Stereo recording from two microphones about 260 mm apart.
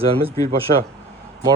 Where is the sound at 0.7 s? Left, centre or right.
Right.